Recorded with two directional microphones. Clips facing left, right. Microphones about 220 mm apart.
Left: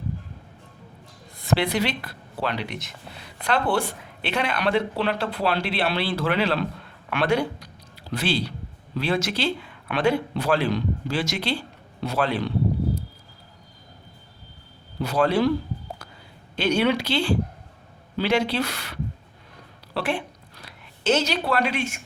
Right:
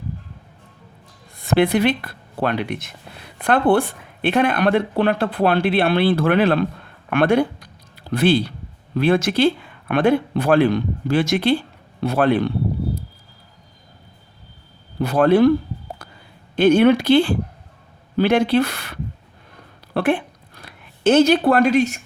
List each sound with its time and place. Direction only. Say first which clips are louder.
1.4 s speech: right 7 dB; 55° right (ahead or behind)
14.9 s speech: right 7 dB; 55° right (ahead or behind)
16.6 s speech: right 9 dB; 50° right (ahead or behind)
19.9 s a sound: right 8 dB; 55° right (ahead or behind)